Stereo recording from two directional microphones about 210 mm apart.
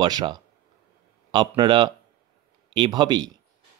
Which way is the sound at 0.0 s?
20° right (ahead or behind).